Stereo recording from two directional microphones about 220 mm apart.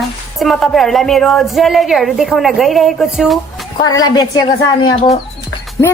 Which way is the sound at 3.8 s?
20° left (ahead or behind).